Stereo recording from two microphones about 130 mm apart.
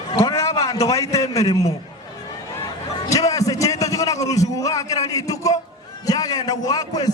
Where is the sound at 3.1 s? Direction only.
25° left (ahead or behind).